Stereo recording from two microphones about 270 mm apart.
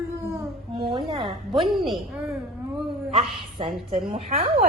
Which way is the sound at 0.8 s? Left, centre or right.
Centre.